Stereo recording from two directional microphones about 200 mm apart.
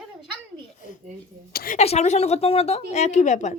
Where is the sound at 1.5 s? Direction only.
50° left (ahead or behind).